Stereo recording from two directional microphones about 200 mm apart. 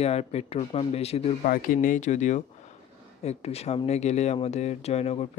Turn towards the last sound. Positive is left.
turn(degrees=30)  # may be behind; listen again after turning